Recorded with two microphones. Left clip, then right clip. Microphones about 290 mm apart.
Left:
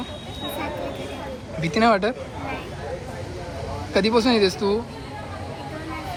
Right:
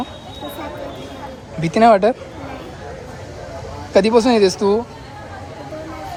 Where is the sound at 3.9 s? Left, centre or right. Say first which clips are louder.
Right 6 dB; centre.